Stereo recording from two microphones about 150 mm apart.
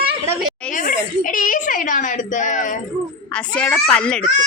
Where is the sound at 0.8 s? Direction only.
65° left (ahead or behind).